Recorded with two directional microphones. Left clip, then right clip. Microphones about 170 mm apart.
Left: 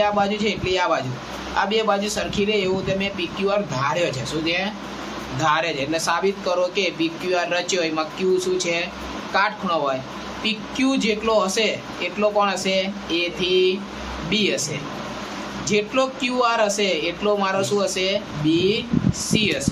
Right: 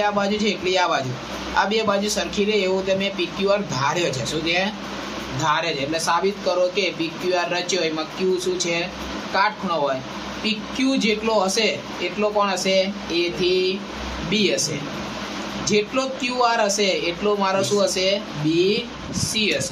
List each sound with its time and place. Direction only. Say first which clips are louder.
0.0 s speech: left 1 dB; centre (ahead or behind)
5.4 s speech: left 1 dB; centre (ahead or behind)